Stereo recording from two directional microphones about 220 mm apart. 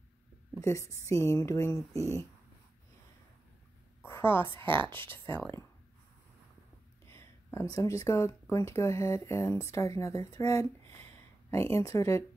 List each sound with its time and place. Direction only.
0.6 s speech: 15° left (ahead or behind)
4.0 s a sound: 10° left (ahead or behind)
4.6 s speech: 20° right (ahead or behind)
5.1 s speech: 10° left (ahead or behind)
7.1 s speech: 10° left (ahead or behind)